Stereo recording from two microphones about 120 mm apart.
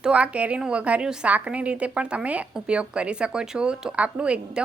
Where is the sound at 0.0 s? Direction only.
10° right (ahead or behind).